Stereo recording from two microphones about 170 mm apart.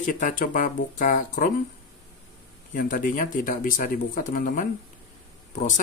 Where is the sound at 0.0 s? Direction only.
50° left (ahead or behind).